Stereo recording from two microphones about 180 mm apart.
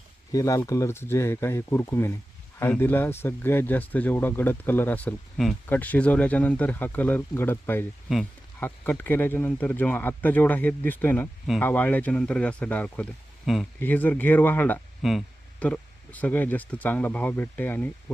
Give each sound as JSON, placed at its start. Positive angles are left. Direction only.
{"t": 0.3, "sound": "speech", "side_deg": 20}